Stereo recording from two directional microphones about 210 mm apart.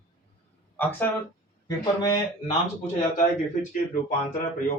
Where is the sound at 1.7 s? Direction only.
15° left (ahead or behind).